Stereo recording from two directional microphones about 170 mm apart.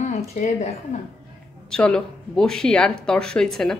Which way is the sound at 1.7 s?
5° left (ahead or behind).